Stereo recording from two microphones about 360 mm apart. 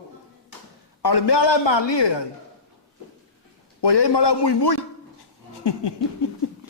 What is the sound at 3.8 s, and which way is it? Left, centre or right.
Speech, left.